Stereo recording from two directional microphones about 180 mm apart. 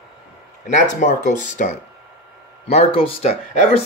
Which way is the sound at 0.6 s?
45° left (ahead or behind).